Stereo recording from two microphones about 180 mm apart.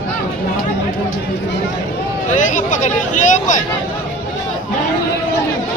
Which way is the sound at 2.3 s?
45° left (ahead or behind).